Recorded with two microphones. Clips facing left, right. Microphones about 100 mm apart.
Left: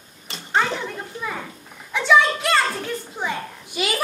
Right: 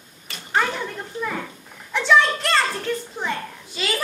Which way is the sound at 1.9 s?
5° left (ahead or behind).